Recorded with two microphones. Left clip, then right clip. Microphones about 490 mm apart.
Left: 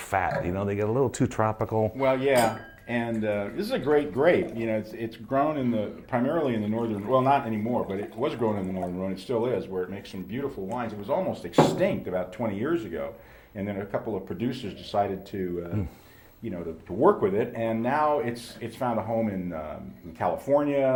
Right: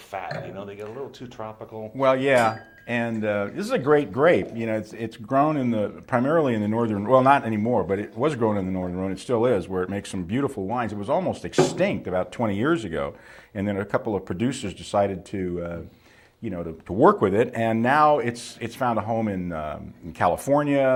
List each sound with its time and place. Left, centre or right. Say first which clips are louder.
0.1 s speech: left 6 dB; left
2.0 s speech: right 5 dB; right
17.0 s speech: right 4 dB; right